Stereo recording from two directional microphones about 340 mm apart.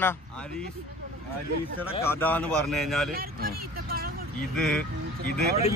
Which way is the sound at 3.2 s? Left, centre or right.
Right.